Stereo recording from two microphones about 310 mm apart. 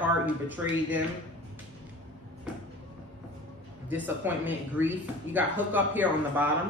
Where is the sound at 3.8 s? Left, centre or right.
Centre.